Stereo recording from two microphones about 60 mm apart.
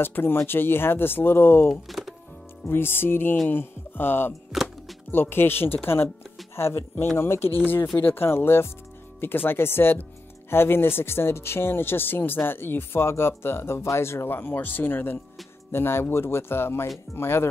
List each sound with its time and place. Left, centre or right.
0.0 s speech: left
1.7 s speech: centre
2.7 s speech: left
4.5 s music: centre
5.1 s speech: left